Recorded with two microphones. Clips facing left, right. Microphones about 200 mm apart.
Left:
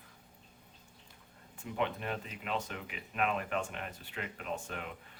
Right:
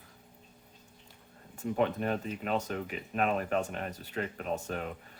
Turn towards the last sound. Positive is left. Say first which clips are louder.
# right 5 dB
turn(degrees=-40)  # may be behind; listen again after turning